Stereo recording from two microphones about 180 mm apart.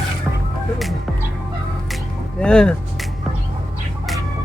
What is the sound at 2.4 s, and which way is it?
Speech, 5° left (ahead or behind).